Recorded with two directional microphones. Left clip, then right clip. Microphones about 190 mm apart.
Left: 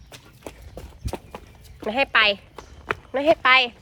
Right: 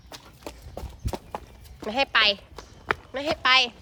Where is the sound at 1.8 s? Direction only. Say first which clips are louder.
Left 3 dB; 5° right (ahead or behind).